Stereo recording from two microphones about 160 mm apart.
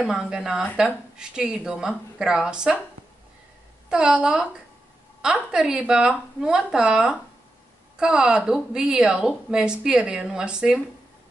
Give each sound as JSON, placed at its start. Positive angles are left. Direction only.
{"t": 0.0, "sound": "a woman's voice", "side_deg": -5}
{"t": 3.9, "sound": "a woman's voice", "side_deg": -5}